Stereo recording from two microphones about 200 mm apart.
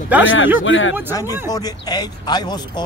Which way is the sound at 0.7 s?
70° left (ahead or behind).